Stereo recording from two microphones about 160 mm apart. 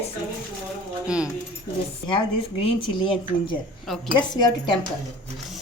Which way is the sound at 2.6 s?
30° left (ahead or behind).